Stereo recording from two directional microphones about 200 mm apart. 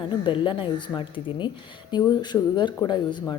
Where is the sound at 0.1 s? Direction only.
25° left (ahead or behind).